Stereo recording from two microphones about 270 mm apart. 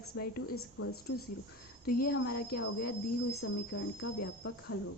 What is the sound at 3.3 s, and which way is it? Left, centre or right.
A woman's voice, left.